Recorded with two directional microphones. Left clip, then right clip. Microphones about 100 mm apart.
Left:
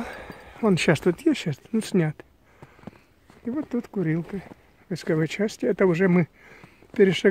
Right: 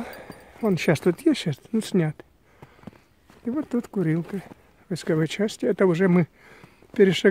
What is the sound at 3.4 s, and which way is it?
Speech, 40° right (ahead or behind).